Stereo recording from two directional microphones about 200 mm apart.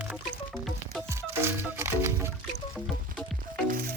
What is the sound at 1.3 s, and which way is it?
Music, 10° right (ahead or behind).